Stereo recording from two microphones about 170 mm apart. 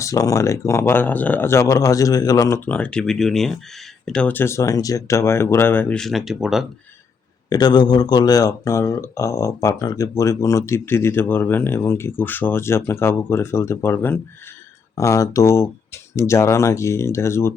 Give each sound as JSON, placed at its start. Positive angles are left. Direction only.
{"t": 0.0, "sound": "speech", "side_deg": 20}
{"t": 7.5, "sound": "speech", "side_deg": 25}